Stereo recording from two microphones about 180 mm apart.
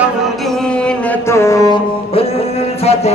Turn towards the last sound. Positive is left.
turn(degrees=35)  # may be behind; listen again after turning